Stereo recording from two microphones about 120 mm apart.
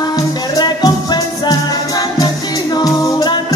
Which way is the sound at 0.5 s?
35° left (ahead or behind).